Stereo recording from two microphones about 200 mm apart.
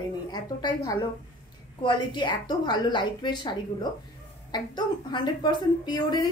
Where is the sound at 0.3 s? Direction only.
20° left (ahead or behind).